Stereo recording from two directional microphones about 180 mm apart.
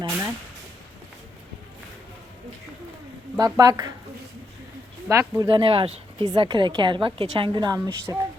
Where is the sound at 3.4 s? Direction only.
20° right (ahead or behind).